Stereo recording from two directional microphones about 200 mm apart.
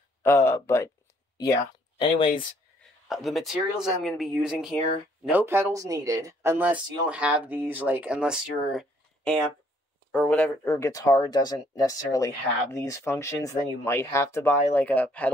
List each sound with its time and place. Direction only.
0.5 s speech: 15° left (ahead or behind)
3.1 s speech: centre (ahead or behind)